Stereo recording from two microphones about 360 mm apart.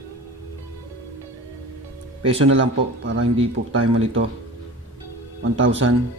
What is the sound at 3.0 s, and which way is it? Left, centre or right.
Speech, right.